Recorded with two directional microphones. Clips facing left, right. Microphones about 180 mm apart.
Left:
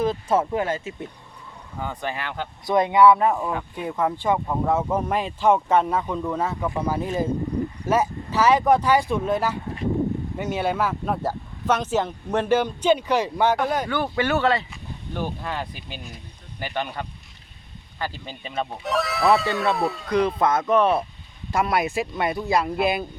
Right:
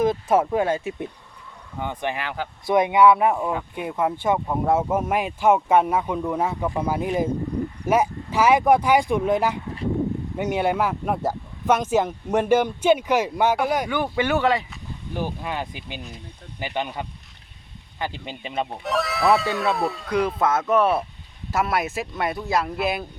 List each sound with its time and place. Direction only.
0.0 s speech: 15° right (ahead or behind)
18.9 s speech: centre (ahead or behind)